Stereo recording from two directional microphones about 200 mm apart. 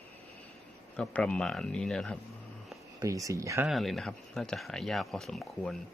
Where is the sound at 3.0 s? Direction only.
15° right (ahead or behind).